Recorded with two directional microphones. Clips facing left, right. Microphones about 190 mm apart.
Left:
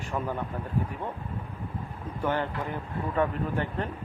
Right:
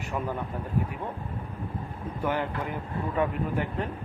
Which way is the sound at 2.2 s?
10° right (ahead or behind).